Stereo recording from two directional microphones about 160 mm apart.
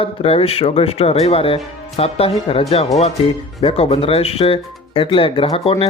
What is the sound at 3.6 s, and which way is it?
Speech, 35° left (ahead or behind).